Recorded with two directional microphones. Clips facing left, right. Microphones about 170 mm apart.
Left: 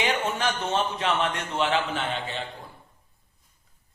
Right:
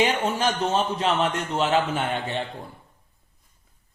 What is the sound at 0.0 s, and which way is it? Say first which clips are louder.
A man's voice: right 4 dB; 40° right (ahead or behind).